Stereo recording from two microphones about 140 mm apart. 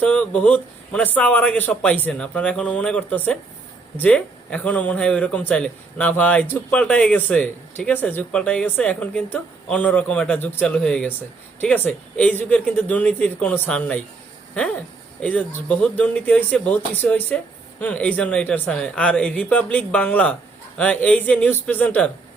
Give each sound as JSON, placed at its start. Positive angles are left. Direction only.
{"t": 0.0, "sound": "a man's voice", "side_deg": 10}
{"t": 15.2, "sound": "a man's voice", "side_deg": 10}